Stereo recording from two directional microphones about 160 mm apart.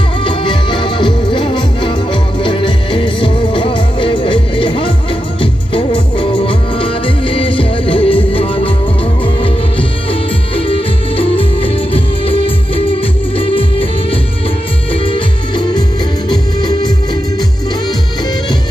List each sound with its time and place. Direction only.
0.2 s music: 30° left (ahead or behind)
15.0 s music: 30° left (ahead or behind)